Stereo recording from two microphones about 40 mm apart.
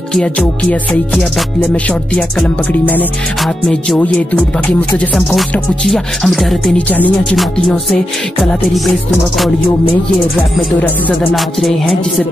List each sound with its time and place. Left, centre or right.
2.8 s music: left
4.6 s music: left
5.9 s music: centre